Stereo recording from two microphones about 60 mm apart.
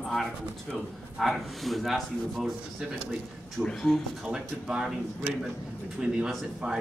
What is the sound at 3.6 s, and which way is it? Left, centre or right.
Speech, centre.